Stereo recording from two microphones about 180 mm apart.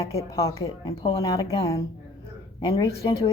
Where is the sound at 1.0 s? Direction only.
30° left (ahead or behind).